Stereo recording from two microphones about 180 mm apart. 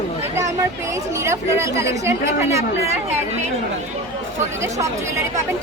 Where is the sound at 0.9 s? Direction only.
15° right (ahead or behind).